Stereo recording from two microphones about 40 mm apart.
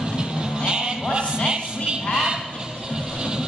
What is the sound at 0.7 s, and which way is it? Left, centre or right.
Sheep, right.